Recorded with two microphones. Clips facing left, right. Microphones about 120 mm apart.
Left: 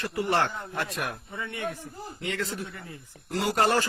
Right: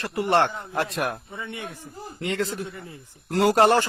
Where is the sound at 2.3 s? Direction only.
35° right (ahead or behind).